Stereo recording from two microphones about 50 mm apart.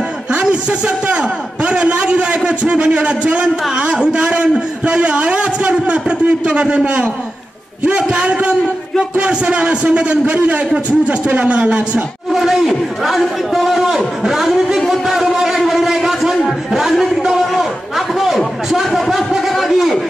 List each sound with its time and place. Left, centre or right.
0.4 s a man's voice: right
12.3 s a sound: centre
18.7 s a man's voice: centre